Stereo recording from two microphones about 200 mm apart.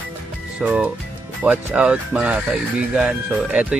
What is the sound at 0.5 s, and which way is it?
Speech, 5° right (ahead or behind).